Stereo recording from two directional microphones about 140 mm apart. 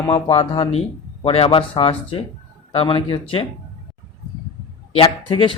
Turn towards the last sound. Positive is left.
turn(degrees=40)  # may be behind; listen again after turning